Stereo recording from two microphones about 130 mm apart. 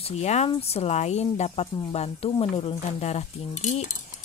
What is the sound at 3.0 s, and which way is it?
Speech, 60° left (ahead or behind).